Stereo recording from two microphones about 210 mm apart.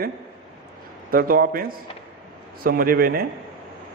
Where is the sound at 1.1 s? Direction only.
45° right (ahead or behind).